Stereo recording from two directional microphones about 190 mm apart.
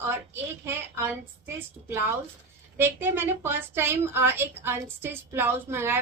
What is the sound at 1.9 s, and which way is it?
Speech, 15° right (ahead or behind).